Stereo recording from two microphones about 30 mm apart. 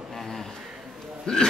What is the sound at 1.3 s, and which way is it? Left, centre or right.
Speech, left.